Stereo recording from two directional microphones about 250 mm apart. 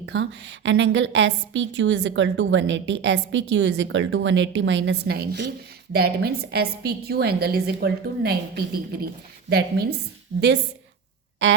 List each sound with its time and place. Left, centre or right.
0.0 s a woman's voice: right